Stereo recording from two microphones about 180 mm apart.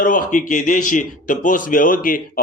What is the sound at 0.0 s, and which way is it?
Speech, 45° left (ahead or behind).